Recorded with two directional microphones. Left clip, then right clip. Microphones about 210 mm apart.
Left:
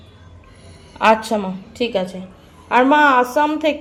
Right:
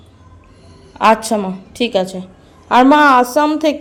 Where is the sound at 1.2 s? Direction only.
15° right (ahead or behind).